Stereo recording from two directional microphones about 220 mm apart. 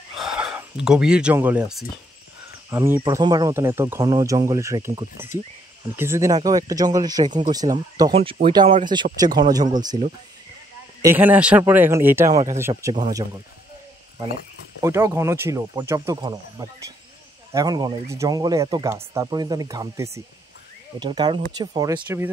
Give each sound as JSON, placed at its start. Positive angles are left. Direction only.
{"t": 0.1, "sound": "a sound", "side_deg": 0}
{"t": 0.8, "sound": "speech", "side_deg": -5}
{"t": 14.8, "sound": "speech", "side_deg": -10}